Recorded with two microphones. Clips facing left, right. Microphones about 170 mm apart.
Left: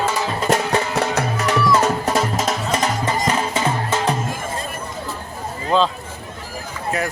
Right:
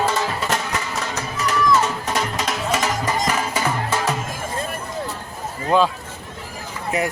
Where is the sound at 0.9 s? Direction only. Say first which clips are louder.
Left 7 dB; 60° left (ahead or behind).